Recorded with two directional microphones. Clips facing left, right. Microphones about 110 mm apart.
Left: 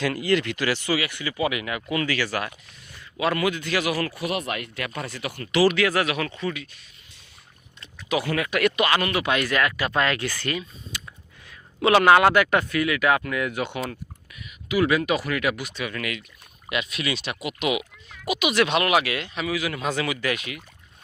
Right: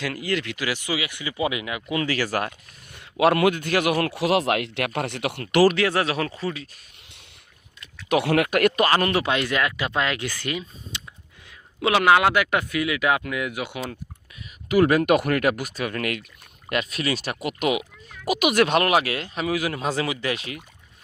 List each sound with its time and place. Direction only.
0.0 s speech: centre (ahead or behind); by 2.0 s 20° right (ahead or behind)
2.0 s speech: 40° right (ahead or behind)
2.9 s speech: 60° right (ahead or behind)
4.1 s speech: 90° right; by 5.7 s 50° right (ahead or behind)
5.7 s speech: 30° right (ahead or behind)
8.1 s speech: 65° right (ahead or behind)
8.4 s speech: 45° right (ahead or behind); by 10.6 s 15° right (ahead or behind)
10.9 s a sound: 20° right (ahead or behind)
11.8 s speech: 5° right (ahead or behind)
14.7 s speech: 45° right (ahead or behind)